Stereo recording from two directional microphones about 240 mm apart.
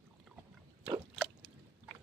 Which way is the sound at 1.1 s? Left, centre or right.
Centre.